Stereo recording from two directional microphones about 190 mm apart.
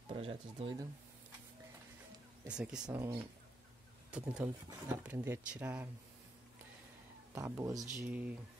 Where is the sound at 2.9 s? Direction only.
20° right (ahead or behind).